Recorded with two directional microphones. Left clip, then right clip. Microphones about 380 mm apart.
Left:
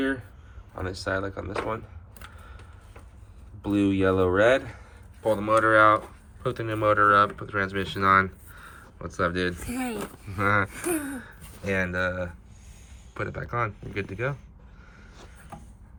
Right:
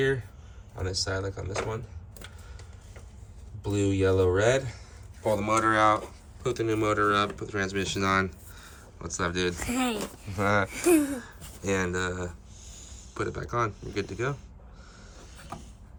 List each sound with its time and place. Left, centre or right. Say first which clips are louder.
0.8 s speech: left 2 dB; centre
3.7 s speech: left 2 dB; centre
9.6 s speech: right 3 dB; centre